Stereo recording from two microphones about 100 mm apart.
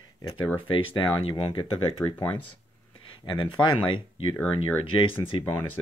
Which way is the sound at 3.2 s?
55° left (ahead or behind).